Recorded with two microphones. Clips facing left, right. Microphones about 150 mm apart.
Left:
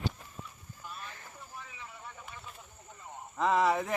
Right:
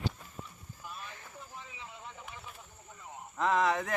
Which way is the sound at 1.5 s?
20° right (ahead or behind).